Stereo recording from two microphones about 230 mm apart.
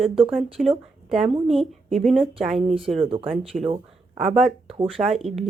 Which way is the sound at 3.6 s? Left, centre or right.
Right.